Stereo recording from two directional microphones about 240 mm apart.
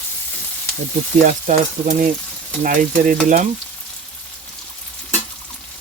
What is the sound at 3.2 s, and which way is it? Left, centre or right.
Speech, right.